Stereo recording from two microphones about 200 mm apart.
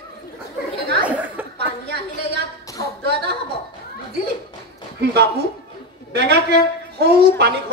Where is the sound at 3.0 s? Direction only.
55° right (ahead or behind).